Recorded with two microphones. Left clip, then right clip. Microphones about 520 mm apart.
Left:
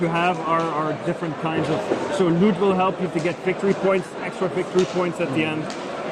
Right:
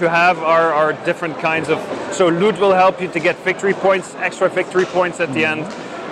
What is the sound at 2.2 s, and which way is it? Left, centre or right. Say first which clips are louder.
Speech: right 8 dB; right.